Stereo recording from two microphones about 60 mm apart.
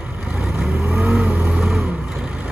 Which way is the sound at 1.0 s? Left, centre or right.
Right.